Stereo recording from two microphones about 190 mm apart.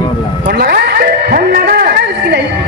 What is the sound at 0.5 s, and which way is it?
Music, 55° right (ahead or behind).